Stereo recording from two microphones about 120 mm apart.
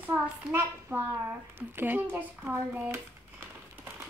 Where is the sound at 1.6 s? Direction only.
15° right (ahead or behind).